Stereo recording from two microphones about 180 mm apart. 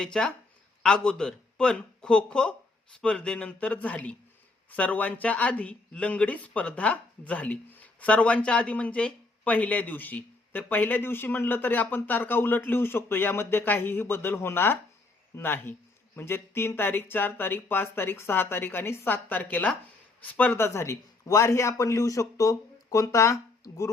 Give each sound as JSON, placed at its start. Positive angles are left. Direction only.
{"t": 0.0, "sound": "speech", "side_deg": 5}